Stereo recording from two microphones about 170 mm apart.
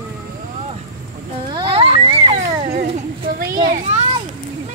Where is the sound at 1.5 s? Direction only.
30° right (ahead or behind).